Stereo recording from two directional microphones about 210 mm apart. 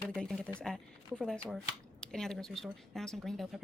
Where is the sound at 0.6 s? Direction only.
Centre (ahead or behind).